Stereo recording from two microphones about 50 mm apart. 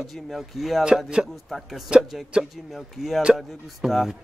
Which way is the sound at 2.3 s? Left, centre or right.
Right.